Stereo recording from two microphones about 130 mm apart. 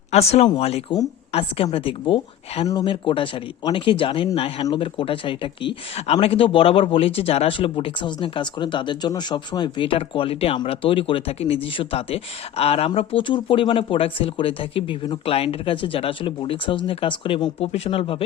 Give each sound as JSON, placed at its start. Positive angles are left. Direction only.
{"t": 0.1, "sound": "speech", "side_deg": 50}